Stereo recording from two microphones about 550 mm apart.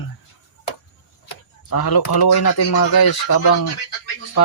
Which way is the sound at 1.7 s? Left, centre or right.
Left.